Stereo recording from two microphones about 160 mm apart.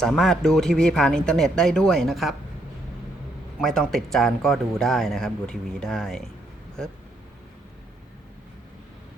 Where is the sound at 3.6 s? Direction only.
Centre (ahead or behind).